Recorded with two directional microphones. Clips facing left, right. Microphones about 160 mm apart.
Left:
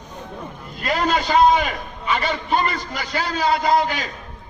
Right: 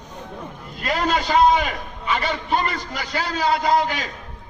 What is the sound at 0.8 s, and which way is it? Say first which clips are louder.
A man's voice: left 1 dB; 50° left (ahead or behind).